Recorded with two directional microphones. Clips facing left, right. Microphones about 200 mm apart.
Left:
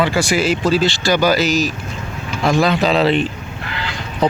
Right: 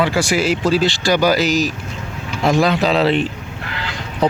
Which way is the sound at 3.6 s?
45° right (ahead or behind).